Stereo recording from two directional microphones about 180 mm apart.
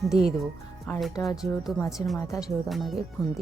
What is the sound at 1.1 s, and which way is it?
Speech, 20° left (ahead or behind).